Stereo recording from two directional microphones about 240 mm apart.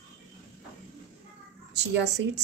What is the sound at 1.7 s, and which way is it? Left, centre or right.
Speech, right.